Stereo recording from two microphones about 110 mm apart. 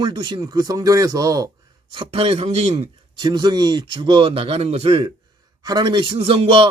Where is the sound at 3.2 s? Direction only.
40° right (ahead or behind); by 5.1 s 60° right (ahead or behind).